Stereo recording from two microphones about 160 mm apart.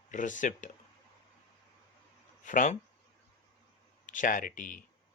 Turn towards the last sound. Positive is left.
turn(degrees=55)  # may be behind; listen again after turning